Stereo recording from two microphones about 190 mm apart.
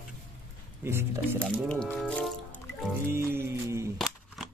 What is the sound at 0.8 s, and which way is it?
Speech, 10° right (ahead or behind).